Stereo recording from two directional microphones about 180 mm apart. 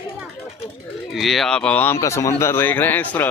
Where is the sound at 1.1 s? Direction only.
Centre (ahead or behind).